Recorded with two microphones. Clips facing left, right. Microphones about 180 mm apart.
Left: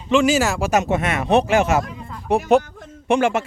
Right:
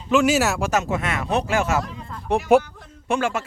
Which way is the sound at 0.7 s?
20° left (ahead or behind).